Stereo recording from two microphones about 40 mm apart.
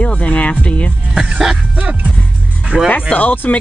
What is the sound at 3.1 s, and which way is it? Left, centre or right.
Speech, left.